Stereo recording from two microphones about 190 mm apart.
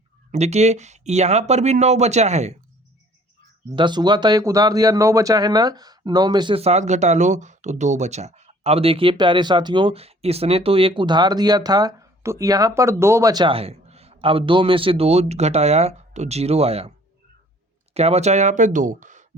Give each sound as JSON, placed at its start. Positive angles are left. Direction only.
{"t": 0.3, "sound": "speech", "side_deg": -35}
{"t": 3.8, "sound": "speech", "side_deg": -25}
{"t": 17.9, "sound": "speech", "side_deg": -35}